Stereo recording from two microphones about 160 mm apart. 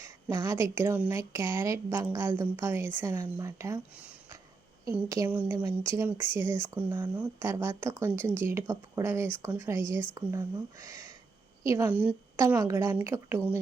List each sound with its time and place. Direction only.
0.3 s speech: 25° right (ahead or behind)
4.9 s a woman's voice: 15° right (ahead or behind)
12.5 s speech: 20° right (ahead or behind)